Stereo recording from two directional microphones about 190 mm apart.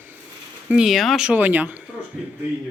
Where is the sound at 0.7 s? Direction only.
5° right (ahead or behind).